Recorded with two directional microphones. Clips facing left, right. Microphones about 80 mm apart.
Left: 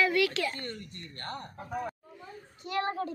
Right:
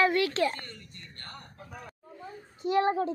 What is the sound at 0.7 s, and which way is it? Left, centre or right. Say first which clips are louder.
Speech: left 6 dB; left.